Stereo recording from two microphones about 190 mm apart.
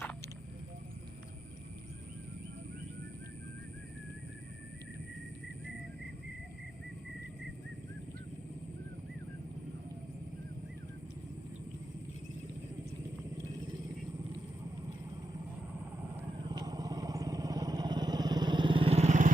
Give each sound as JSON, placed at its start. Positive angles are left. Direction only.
{"t": 16.4, "sound": "vehicle", "side_deg": -20}